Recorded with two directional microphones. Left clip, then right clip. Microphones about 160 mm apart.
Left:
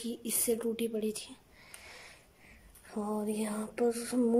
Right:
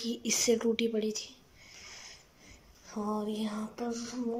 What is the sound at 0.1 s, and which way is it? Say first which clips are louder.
Speech: right 5 dB; 10° left (ahead or behind).